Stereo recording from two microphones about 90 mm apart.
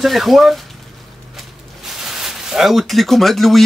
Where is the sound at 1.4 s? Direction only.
5° right (ahead or behind).